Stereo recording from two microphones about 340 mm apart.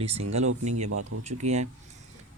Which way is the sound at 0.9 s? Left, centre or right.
Right.